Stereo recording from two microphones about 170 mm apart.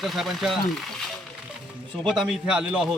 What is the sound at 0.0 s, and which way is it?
A man's voice, centre (ahead or behind).